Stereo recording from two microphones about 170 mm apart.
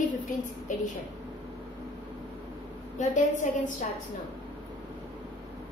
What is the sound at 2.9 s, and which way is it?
Speech, 50° left (ahead or behind).